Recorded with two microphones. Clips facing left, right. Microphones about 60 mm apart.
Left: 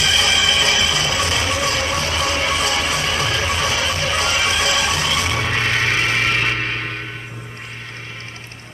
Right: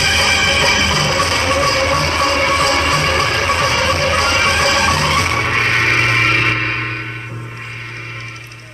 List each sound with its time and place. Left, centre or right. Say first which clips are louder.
0.0 s music: right 3 dB; right